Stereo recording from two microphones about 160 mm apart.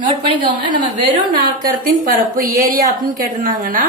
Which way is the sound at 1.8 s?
60° right (ahead or behind).